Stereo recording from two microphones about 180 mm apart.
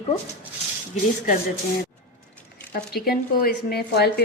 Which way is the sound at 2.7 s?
60° left (ahead or behind).